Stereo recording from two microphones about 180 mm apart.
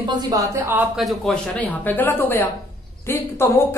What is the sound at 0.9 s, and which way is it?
Speech, centre (ahead or behind).